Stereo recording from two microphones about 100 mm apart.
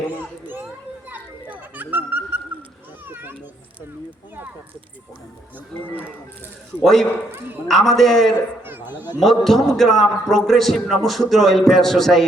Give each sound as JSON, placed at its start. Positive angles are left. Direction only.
{"t": 1.1, "sound": "children playing", "side_deg": -15}
{"t": 6.8, "sound": "a man's voice", "side_deg": 5}
{"t": 7.3, "sound": "a woman's voice", "side_deg": -20}
{"t": 7.7, "sound": "a man's voice", "side_deg": 0}
{"t": 8.6, "sound": "a sound", "side_deg": -20}
{"t": 9.4, "sound": "a man's voice", "side_deg": 5}